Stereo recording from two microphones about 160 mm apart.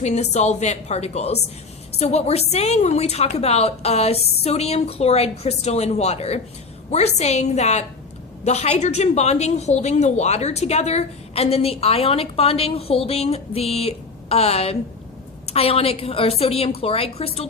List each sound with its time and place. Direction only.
0.0 s a woman's voice: 45° left (ahead or behind)